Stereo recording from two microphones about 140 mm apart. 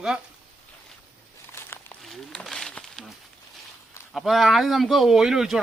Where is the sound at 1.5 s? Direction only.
15° left (ahead or behind).